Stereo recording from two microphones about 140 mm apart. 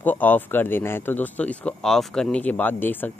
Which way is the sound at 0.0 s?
15° left (ahead or behind).